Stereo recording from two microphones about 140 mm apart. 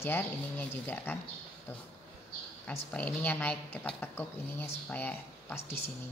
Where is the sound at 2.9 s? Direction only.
10° left (ahead or behind).